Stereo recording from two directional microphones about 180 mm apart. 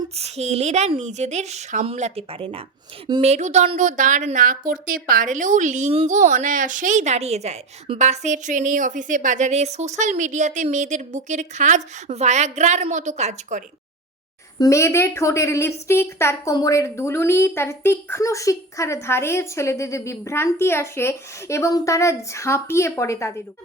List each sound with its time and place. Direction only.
0.2 s a woman's voice: 35° right (ahead or behind)
14.6 s a woman's voice: 15° left (ahead or behind)